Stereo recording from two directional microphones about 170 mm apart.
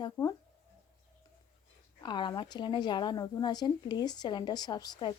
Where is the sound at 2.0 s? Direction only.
25° left (ahead or behind).